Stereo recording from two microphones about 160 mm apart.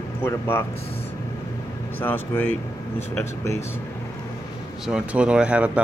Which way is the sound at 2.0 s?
10° left (ahead or behind).